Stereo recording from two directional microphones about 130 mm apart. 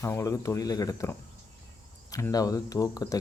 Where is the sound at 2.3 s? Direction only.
30° left (ahead or behind).